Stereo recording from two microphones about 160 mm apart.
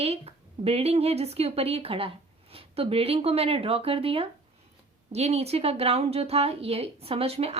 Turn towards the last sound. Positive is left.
turn(degrees=-40)  # may be behind; listen again after turning